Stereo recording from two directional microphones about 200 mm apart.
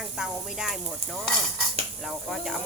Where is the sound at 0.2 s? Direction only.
5° right (ahead or behind).